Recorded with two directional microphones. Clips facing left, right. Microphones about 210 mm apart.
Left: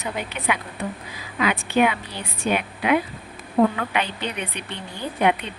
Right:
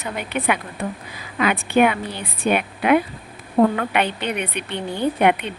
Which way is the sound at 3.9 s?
60° right (ahead or behind).